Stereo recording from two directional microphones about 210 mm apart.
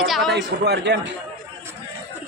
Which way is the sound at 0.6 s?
55° right (ahead or behind).